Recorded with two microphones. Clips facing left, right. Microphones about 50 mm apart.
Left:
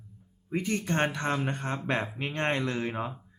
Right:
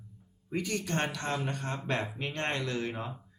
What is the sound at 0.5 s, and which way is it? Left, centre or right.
Speech, left.